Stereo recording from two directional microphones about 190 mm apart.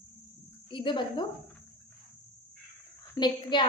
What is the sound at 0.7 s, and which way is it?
Cricket, 25° left (ahead or behind).